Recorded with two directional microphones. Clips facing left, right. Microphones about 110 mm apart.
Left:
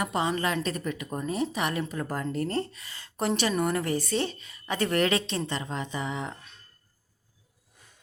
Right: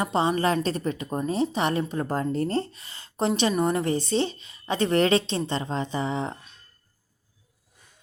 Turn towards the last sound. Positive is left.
turn(degrees=-30)  # may be behind; listen again after turning